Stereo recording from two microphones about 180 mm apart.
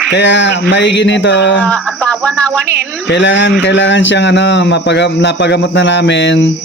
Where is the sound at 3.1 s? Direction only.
90° left.